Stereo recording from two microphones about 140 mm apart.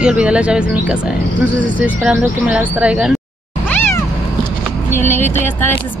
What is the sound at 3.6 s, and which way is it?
Cat, 15° left (ahead or behind).